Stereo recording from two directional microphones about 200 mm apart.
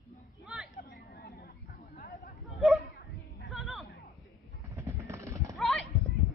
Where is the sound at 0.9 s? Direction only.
55° left (ahead or behind).